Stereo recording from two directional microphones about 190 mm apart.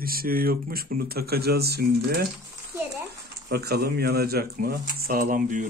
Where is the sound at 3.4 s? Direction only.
55° right (ahead or behind).